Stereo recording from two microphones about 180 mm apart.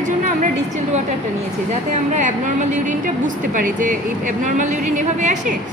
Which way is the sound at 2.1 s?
45° right (ahead or behind).